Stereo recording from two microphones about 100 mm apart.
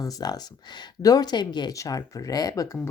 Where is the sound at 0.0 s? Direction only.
40° left (ahead or behind).